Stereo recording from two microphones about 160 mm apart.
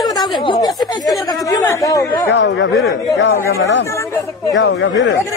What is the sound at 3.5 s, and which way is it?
Speech, 90° left.